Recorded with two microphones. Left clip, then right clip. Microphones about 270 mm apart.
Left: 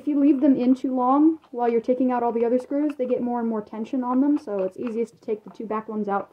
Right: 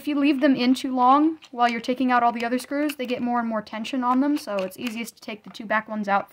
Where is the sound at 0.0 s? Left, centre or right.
Right.